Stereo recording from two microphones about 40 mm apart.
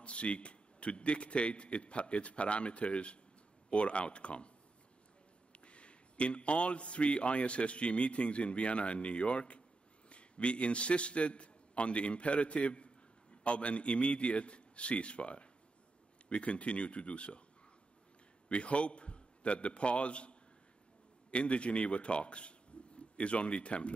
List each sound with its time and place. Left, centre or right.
0.0 s a man's voice: left
5.5 s a man's voice: left
18.5 s a man's voice: left